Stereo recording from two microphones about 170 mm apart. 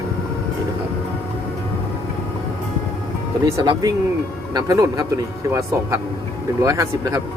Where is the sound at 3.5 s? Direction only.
20° right (ahead or behind).